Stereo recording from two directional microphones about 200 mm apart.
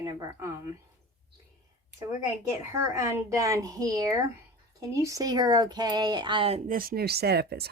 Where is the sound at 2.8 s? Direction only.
15° right (ahead or behind).